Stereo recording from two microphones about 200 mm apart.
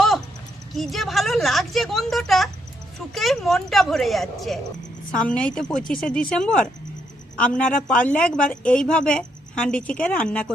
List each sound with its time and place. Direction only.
0.7 s a woman's voice: centre (ahead or behind)